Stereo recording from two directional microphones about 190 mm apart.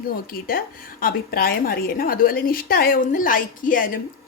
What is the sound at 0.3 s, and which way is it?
A woman's voice, 50° left (ahead or behind).